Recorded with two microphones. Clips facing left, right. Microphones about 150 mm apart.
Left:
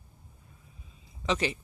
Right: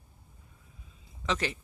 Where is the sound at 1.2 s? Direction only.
10° left (ahead or behind).